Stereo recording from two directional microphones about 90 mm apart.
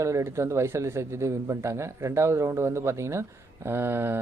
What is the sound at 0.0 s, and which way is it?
Speech, 35° right (ahead or behind).